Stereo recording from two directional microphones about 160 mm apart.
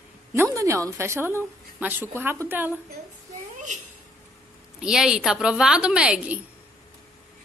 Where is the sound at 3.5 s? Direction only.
50° right (ahead or behind).